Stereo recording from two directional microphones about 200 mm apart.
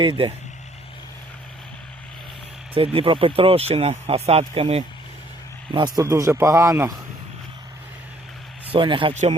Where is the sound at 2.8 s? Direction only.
25° right (ahead or behind).